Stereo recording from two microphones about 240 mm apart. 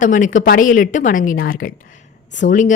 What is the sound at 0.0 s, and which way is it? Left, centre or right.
A woman's voice, left.